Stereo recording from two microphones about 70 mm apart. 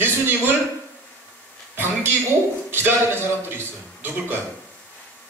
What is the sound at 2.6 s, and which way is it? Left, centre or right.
A man's voice, right.